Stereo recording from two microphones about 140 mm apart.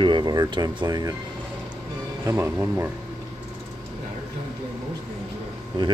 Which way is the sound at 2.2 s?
20° right (ahead or behind).